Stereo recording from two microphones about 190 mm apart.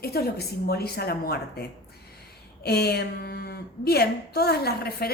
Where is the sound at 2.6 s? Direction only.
55° left (ahead or behind).